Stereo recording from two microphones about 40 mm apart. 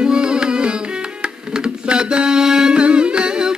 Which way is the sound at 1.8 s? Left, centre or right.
Right.